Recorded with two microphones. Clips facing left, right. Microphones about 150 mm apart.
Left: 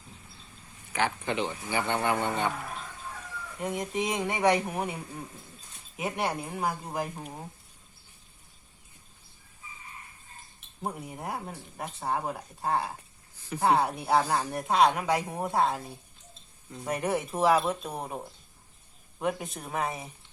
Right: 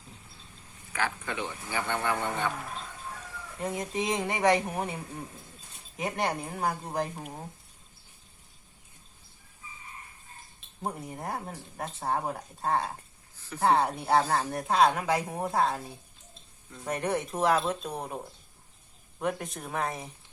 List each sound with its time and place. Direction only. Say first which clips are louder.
0.9 s a man's voice: left 4 dB; 20° left (ahead or behind)
3.8 s a woman's voice: even; centre (ahead or behind)
10.8 s a woman's voice: even; 5° left (ahead or behind)
16.8 s a woman's voice: left 1 dB; 5° left (ahead or behind)
19.2 s a woman's voice: left 1 dB; centre (ahead or behind)